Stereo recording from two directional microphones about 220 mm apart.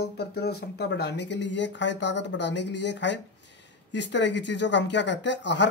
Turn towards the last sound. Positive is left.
turn(degrees=55)  # may be behind; listen again after turning